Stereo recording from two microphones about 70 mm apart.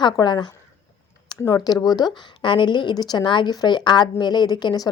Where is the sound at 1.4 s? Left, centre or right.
Left.